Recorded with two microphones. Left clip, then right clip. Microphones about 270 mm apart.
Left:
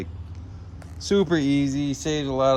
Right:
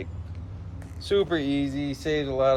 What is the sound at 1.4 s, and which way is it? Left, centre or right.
Music, left.